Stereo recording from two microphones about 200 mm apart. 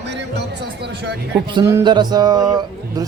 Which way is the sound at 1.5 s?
20° right (ahead or behind).